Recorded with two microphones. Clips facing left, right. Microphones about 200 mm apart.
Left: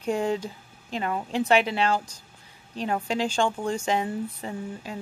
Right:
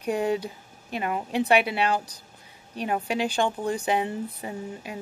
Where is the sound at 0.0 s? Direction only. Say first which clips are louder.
Even; 15° right (ahead or behind).